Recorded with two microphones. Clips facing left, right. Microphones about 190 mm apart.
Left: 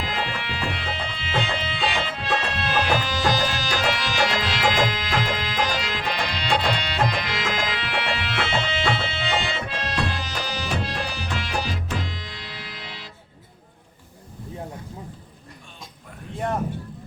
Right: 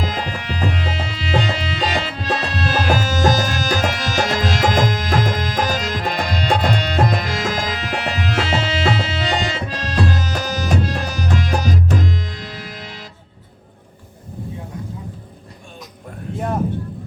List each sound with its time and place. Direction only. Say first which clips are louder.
0.0 s music: right 4 dB; 40° right (ahead or behind)